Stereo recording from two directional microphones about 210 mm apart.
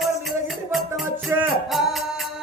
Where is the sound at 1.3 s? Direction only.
5° right (ahead or behind).